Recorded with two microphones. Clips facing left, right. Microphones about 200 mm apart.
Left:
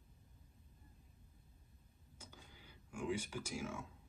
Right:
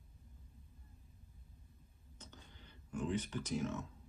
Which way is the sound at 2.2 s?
10° left (ahead or behind).